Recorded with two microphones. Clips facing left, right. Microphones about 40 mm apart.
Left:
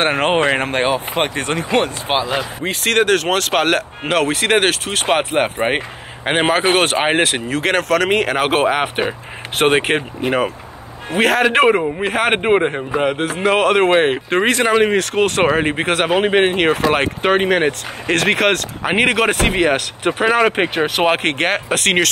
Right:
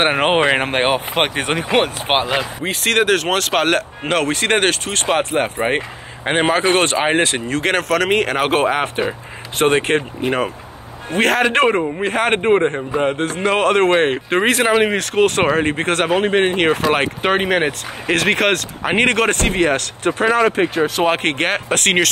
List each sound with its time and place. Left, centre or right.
0.0 s speech: right
0.6 s speech: right
2.6 s speech: centre
5.4 s speech: centre
7.4 s speech: centre
16.5 s speech: centre
20.5 s speech: left
21.1 s speech: centre